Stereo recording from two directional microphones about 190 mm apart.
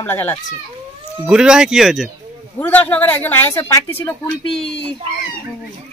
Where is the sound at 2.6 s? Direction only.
10° left (ahead or behind).